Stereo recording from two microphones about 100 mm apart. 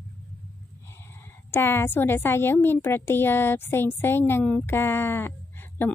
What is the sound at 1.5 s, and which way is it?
Speech, 25° left (ahead or behind).